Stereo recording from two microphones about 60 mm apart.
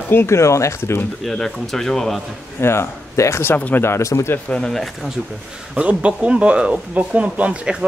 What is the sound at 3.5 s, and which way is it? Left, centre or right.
Speech, left.